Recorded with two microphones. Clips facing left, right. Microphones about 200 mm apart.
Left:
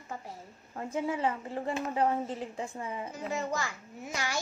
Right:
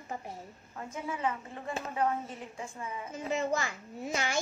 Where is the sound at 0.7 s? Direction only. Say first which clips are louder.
Left 6 dB; 30° left (ahead or behind).